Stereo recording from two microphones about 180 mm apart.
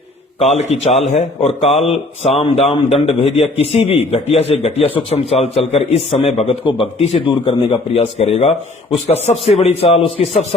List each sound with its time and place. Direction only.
0.3 s a man's voice: 35° left (ahead or behind)